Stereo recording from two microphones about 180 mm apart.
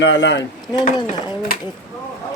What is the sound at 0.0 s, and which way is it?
Speech, 80° left.